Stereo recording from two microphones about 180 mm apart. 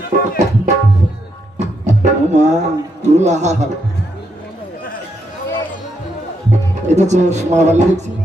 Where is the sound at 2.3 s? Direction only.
40° right (ahead or behind).